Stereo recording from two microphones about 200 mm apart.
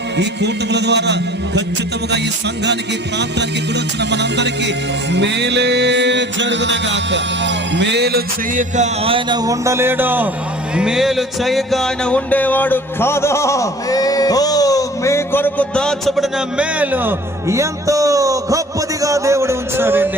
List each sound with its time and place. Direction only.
0.2 s music: 60° right (ahead or behind)
4.1 s music: 60° right (ahead or behind)
8.7 s speech: 30° right (ahead or behind); by 10.2 s 10° right (ahead or behind)
10.8 s music: 5° right (ahead or behind)
19.0 s speech: 15° right (ahead or behind)